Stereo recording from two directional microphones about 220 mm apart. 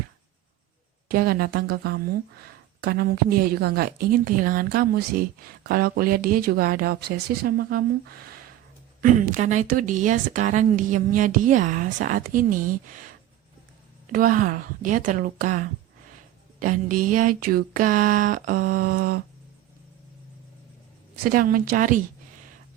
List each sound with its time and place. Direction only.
1.0 s a woman's voice: 40° right (ahead or behind)
9.0 s a woman's voice: 35° right (ahead or behind)
14.1 s a woman's voice: 40° right (ahead or behind)
21.2 s a woman's voice: 40° right (ahead or behind)